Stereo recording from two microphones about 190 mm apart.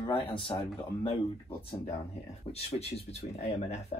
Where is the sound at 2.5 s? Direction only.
35° left (ahead or behind).